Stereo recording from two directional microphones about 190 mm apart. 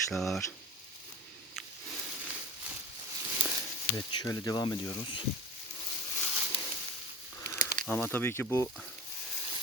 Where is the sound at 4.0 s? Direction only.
20° left (ahead or behind).